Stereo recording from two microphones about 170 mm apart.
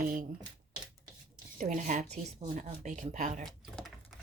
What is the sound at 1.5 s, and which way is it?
Speech, 50° right (ahead or behind).